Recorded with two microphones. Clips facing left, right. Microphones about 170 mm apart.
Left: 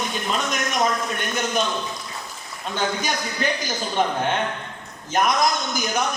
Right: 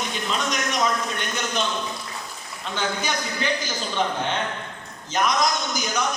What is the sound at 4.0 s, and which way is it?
Speech, 50° left (ahead or behind).